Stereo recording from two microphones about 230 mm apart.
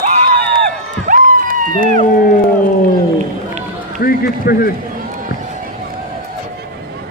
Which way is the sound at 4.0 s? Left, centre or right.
Left.